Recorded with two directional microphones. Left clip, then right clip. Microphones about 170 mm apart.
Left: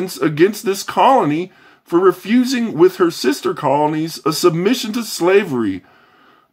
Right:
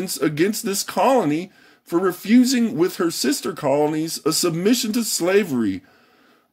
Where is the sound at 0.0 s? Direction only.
30° right (ahead or behind).